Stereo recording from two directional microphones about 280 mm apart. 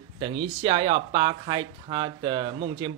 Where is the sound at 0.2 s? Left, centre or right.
Centre.